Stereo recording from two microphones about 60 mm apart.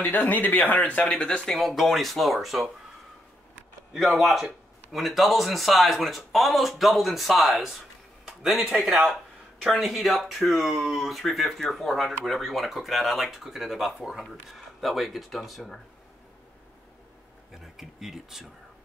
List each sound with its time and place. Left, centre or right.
0.0 s speech: left
1.5 s speech: centre
3.9 s a man's voice: centre
17.5 s speech: centre